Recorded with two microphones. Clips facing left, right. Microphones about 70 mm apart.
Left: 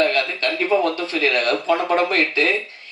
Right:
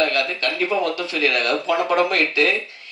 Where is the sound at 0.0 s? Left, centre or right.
Left.